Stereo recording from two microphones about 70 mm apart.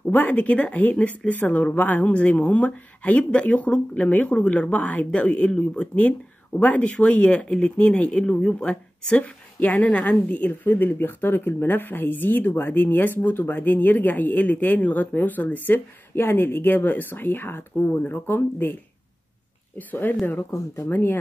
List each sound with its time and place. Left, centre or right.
0.1 s speech: left
19.9 s speech: left
20.5 s speech: left
20.9 s speech: left